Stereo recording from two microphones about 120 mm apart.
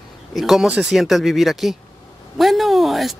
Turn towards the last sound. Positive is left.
turn(degrees=0)  # may be behind; listen again after turning